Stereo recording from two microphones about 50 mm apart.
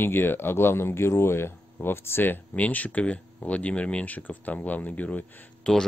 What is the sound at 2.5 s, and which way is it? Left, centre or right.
Speech, left.